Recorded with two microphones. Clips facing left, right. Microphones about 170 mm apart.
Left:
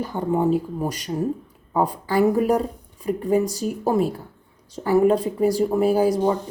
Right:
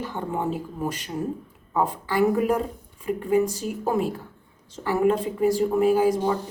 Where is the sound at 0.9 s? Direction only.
40° left (ahead or behind).